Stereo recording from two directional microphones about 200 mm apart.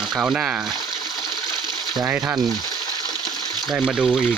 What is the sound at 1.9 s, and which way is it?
Speech, 10° right (ahead or behind).